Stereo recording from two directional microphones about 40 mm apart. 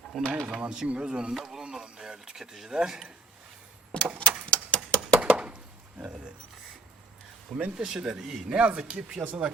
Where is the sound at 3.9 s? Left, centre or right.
Left.